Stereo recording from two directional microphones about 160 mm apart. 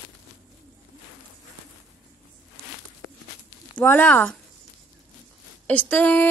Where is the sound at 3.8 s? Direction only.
10° left (ahead or behind).